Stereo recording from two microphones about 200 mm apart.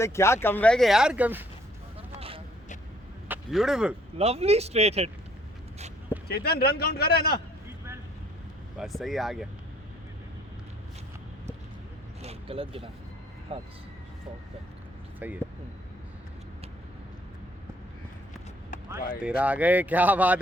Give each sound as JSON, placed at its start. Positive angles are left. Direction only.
{"t": 0.0, "sound": "speech", "side_deg": 15}
{"t": 3.2, "sound": "speech", "side_deg": -5}
{"t": 4.2, "sound": "speech", "side_deg": -30}
{"t": 6.2, "sound": "speech", "side_deg": 50}
{"t": 8.8, "sound": "speech", "side_deg": 0}
{"t": 12.2, "sound": "vehicle", "side_deg": -30}
{"t": 13.5, "sound": "speech", "side_deg": -30}
{"t": 15.2, "sound": "speech", "side_deg": -10}
{"t": 19.4, "sound": "speech", "side_deg": -5}